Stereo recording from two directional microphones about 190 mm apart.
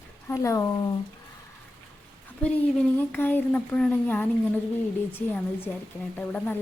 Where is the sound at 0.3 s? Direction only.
15° left (ahead or behind).